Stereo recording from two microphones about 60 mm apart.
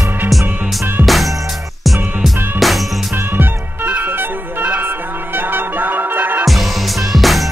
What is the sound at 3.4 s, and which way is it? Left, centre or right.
Music, right.